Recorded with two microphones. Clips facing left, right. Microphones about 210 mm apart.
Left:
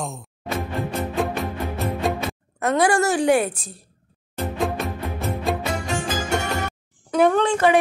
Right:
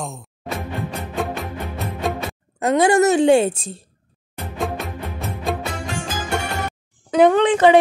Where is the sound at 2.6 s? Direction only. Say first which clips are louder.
Right 4 dB; 20° right (ahead or behind).